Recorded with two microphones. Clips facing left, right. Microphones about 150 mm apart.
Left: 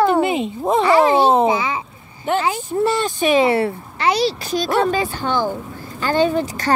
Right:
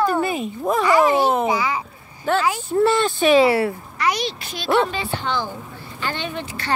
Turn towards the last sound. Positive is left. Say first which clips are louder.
# left 11 dB
turn(degrees=40)  # may be behind; listen again after turning